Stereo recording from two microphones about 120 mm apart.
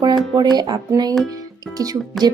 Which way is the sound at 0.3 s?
35° right (ahead or behind).